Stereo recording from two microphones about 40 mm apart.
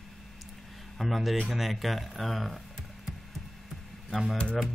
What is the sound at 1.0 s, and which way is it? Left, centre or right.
Speech, centre.